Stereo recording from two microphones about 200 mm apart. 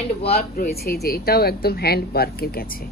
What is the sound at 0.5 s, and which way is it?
Speech, 50° left (ahead or behind).